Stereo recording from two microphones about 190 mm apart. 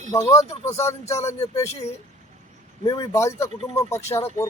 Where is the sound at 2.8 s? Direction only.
20° left (ahead or behind).